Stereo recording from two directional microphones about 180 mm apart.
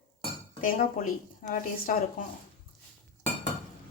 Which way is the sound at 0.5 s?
50° left (ahead or behind).